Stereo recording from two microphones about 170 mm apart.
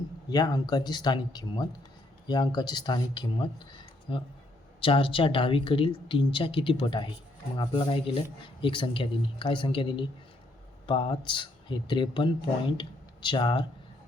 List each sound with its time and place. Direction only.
0.3 s speech: 25° left (ahead or behind)